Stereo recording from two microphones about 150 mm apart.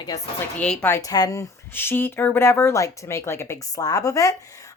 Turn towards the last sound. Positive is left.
turn(degrees=20)  # may be behind; listen again after turning